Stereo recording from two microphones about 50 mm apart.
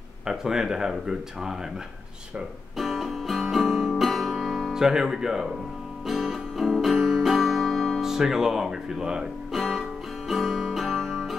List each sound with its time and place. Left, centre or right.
0.3 s speech: centre
2.8 s music: centre
3.9 s guitar: centre
6.0 s music: centre
11.0 s music: centre